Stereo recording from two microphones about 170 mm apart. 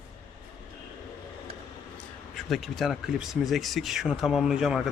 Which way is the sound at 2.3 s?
Centre (ahead or behind).